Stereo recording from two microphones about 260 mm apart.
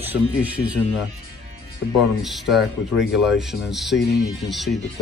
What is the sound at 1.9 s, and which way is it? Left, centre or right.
Speech, centre.